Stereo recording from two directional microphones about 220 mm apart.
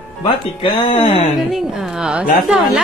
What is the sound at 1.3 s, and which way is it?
A woman's voice, centre (ahead or behind).